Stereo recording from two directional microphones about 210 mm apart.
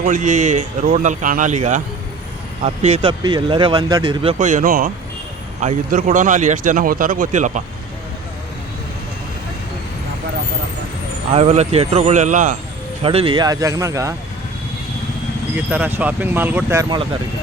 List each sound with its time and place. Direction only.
0.0 s speech: 40° right (ahead or behind)
11.3 s speech: 30° right (ahead or behind)
13.0 s speech: 25° right (ahead or behind)
15.5 s speech: 10° right (ahead or behind)